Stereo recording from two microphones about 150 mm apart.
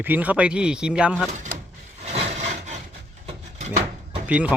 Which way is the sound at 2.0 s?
45° right (ahead or behind).